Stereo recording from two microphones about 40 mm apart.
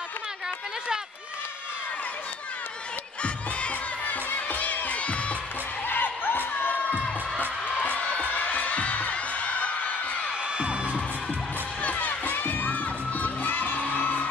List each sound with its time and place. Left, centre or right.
4.0 s music: left
5.9 s a sound: left
7.0 s music: left
10.6 s music: right
11.8 s children shouting: left
13.7 s music: left